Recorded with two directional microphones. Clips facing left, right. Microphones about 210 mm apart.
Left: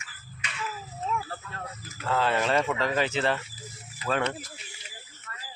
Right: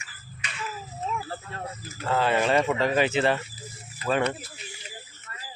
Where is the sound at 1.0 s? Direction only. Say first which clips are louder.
Even; 25° right (ahead or behind).